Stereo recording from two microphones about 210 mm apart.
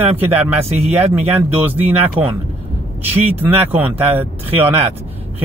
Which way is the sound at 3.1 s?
10° right (ahead or behind).